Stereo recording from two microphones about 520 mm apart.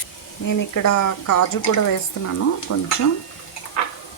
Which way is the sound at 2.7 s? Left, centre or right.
Left.